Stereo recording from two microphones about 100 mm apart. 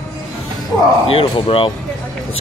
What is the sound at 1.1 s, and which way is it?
Speech, 65° left (ahead or behind).